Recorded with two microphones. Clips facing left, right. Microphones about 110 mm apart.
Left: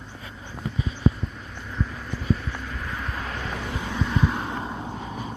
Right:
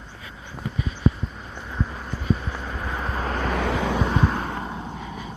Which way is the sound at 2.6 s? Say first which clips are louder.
Right 3 dB; 35° right (ahead or behind).